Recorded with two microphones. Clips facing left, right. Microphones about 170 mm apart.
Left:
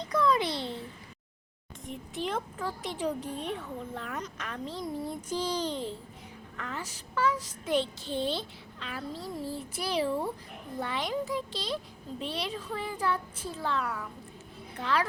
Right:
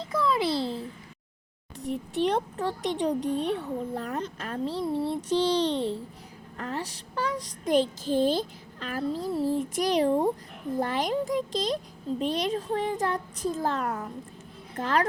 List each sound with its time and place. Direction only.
0.0 s babbling: 25° right (ahead or behind)
1.9 s a sound: 35° right (ahead or behind)
2.3 s a child's voice: 35° right (ahead or behind)
9.5 s child singing: 90° right
9.8 s a child's voice: 40° right (ahead or behind)